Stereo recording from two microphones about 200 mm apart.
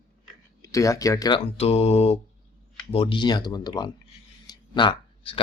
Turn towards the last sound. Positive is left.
turn(degrees=25)  # may be behind; listen again after turning